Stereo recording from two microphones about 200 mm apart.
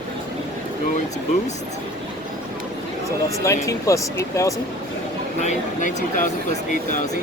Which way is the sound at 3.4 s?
15° left (ahead or behind).